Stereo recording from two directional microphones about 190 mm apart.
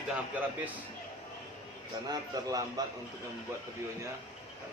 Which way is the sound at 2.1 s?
20° right (ahead or behind).